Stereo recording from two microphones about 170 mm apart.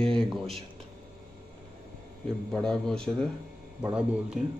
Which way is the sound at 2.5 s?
5° left (ahead or behind).